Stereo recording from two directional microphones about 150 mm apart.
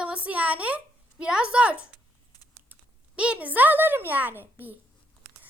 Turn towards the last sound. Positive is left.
turn(degrees=-15)  # may be behind; listen again after turning